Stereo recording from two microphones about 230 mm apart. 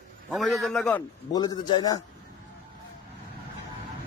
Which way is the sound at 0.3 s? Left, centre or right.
Centre.